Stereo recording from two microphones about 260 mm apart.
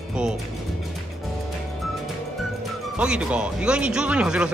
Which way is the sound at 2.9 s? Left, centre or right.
Centre.